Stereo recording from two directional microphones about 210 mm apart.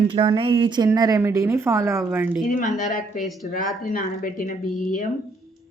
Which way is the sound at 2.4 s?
40° left (ahead or behind).